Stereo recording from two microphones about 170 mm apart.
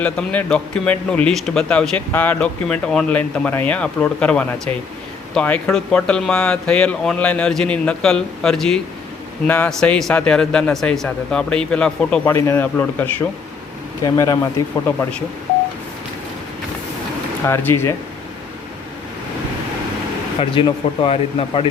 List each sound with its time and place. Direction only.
0.0 s a man's voice: 10° left (ahead or behind)
17.4 s a man's voice: 15° left (ahead or behind)
20.4 s speech: 30° left (ahead or behind)